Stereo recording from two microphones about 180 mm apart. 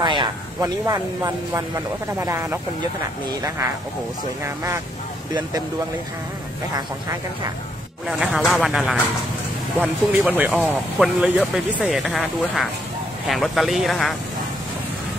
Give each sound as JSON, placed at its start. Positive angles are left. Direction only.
{"t": 0.0, "sound": "speech", "side_deg": -25}
{"t": 8.1, "sound": "speech", "side_deg": 0}